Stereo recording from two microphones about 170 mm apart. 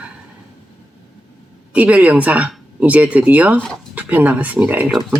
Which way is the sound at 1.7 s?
10° right (ahead or behind).